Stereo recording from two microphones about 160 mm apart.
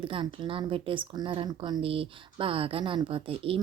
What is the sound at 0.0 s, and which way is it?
A woman's voice, 30° right (ahead or behind).